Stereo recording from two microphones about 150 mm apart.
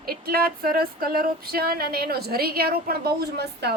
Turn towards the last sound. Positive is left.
turn(degrees=-90)